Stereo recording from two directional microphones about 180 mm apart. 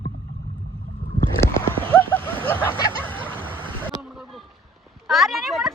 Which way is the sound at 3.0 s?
10° left (ahead or behind).